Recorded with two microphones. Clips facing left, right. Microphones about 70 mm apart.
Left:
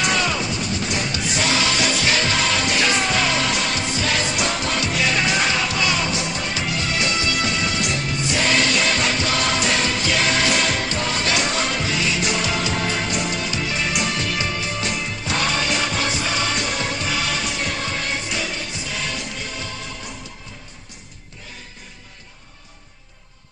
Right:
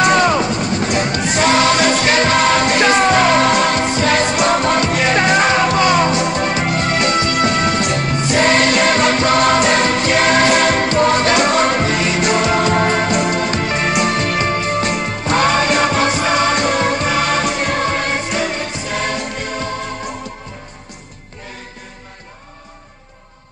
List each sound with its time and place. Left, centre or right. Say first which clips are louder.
0.0 s music: right 9 dB; right